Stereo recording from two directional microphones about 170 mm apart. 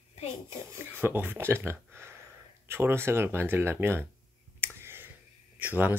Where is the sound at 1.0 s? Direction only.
10° right (ahead or behind).